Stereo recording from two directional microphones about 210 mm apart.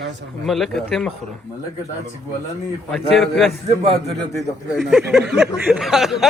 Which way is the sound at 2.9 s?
Centre (ahead or behind).